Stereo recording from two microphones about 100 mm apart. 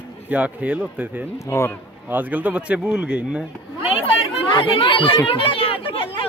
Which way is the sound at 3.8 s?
70° left (ahead or behind).